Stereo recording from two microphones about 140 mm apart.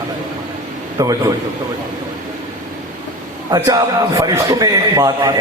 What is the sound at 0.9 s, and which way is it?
Speech, 25° right (ahead or behind).